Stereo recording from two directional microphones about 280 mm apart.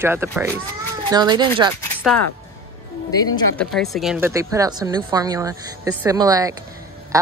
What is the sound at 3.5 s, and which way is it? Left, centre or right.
A man's voice, centre.